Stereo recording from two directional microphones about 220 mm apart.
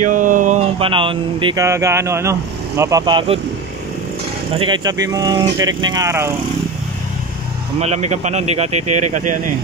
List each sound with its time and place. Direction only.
0.0 s speech: 35° right (ahead or behind); by 3.3 s 20° right (ahead or behind)
4.6 s speech: 20° right (ahead or behind)
7.8 s speech: 30° right (ahead or behind)